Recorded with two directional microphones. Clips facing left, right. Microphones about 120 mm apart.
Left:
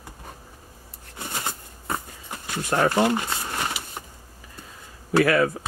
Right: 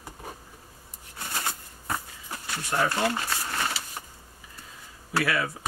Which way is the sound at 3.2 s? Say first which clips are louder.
Left 2 dB; 20° left (ahead or behind).